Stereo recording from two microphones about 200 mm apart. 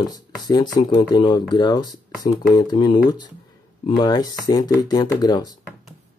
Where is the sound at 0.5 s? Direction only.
20° left (ahead or behind).